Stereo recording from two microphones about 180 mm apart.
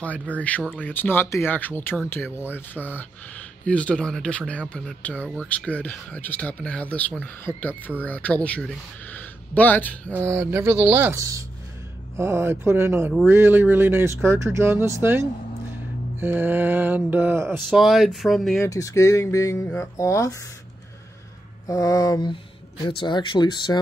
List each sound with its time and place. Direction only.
0.3 s speech: 10° left (ahead or behind)
10.2 s speech: 15° right (ahead or behind)
17.6 s speech: centre (ahead or behind)
18.6 s speech: 20° left (ahead or behind)
21.6 s speech: 20° left (ahead or behind)